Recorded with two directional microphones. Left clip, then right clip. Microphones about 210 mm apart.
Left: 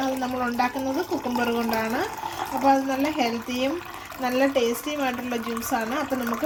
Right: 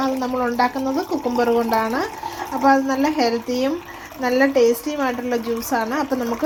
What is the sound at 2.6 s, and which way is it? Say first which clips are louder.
Speech: right 5 dB; 20° right (ahead or behind).